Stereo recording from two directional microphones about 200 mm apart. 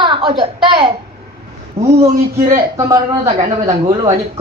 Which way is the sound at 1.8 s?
30° right (ahead or behind).